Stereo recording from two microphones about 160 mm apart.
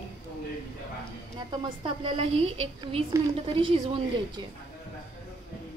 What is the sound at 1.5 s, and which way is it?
A woman's voice, 30° right (ahead or behind).